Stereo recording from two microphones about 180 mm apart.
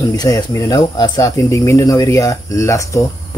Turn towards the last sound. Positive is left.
turn(degrees=15)  # may be behind; listen again after turning